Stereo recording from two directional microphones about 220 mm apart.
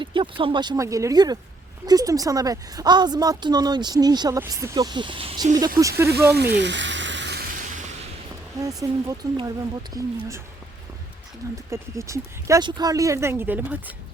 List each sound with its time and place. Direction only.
0.0 s a woman's voice: 20° right (ahead or behind)
6.3 s frying: 50° right (ahead or behind)
8.6 s a woman's voice: 15° right (ahead or behind)
11.7 s a woman's voice: 15° right (ahead or behind)